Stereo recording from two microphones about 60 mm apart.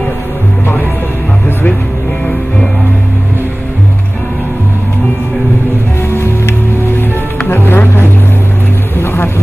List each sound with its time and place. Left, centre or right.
7.4 s music: left
9.0 s vehicle: left